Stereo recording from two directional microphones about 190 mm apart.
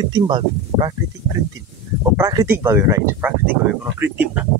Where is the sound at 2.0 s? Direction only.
20° right (ahead or behind).